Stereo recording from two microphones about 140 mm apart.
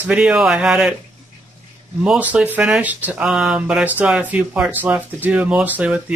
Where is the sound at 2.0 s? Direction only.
10° right (ahead or behind).